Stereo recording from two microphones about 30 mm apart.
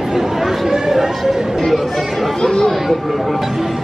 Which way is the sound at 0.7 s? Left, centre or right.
Centre.